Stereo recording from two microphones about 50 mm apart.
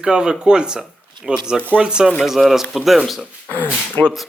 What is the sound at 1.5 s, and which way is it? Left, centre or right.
Speech, right.